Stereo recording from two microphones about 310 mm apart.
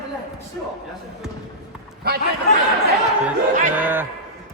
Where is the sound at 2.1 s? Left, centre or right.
Right.